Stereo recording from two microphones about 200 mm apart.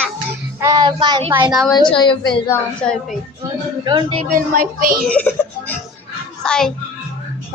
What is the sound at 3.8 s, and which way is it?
Speech, 25° right (ahead or behind).